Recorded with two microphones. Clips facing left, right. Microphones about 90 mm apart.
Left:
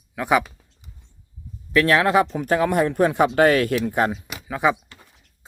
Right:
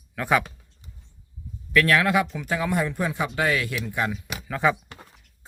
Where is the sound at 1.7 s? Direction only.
25° left (ahead or behind); by 4.1 s 45° left (ahead or behind).